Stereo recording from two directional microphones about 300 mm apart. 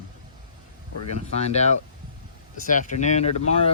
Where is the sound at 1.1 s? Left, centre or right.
Left.